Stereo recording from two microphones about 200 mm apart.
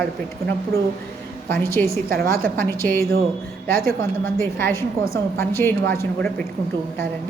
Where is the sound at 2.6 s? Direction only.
10° left (ahead or behind).